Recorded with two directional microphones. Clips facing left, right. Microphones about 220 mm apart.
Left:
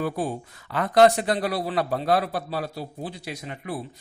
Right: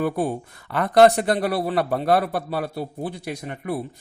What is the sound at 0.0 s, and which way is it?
Speech, 60° right (ahead or behind).